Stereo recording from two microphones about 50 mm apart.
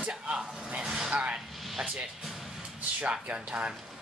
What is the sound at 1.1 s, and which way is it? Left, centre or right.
Speech, right.